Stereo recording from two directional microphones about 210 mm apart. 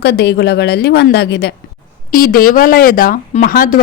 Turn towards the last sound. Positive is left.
turn(degrees=40)  # may be behind; listen again after turning